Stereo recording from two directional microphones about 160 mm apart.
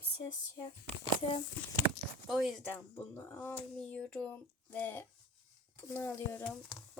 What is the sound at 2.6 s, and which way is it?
A child's voice, 10° left (ahead or behind).